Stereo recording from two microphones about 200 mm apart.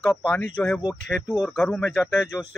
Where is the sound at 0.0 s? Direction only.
5° left (ahead or behind).